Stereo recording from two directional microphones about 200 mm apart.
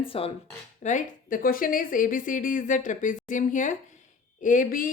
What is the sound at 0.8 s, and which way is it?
A woman's voice, 40° left (ahead or behind).